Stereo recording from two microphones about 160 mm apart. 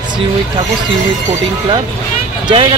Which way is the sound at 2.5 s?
30° right (ahead or behind).